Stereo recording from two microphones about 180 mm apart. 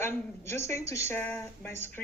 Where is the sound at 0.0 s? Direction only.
15° left (ahead or behind).